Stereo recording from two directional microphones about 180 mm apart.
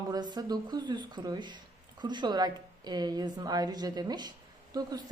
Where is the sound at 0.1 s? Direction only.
25° right (ahead or behind).